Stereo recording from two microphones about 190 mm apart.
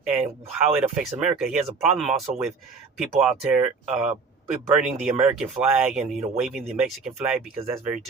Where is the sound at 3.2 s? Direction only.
10° right (ahead or behind).